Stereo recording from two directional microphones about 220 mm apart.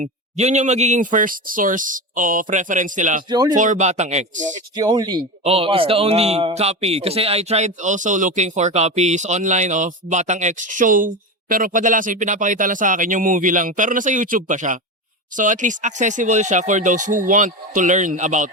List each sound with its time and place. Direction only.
0.0 s a man's voice: 30° right (ahead or behind)
3.2 s speech: 20° right (ahead or behind)
3.5 s a man's voice: 35° right (ahead or behind)
4.8 s a man's voice: 15° right (ahead or behind); by 18.5 s 35° right (ahead or behind)